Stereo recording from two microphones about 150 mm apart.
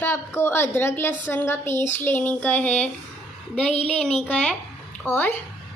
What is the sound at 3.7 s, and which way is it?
Child singing, 45° left (ahead or behind).